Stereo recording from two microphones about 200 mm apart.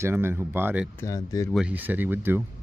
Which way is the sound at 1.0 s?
15° left (ahead or behind).